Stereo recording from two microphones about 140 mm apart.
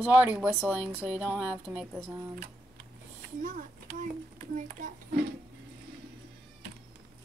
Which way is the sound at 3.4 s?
65° right (ahead or behind).